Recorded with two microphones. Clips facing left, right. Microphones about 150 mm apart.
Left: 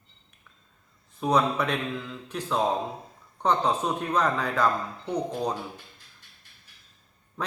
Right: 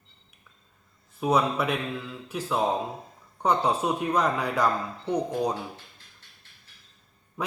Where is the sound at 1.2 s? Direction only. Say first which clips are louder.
Even; 5° right (ahead or behind).